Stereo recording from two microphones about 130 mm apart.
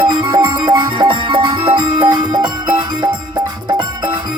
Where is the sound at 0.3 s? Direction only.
35° right (ahead or behind).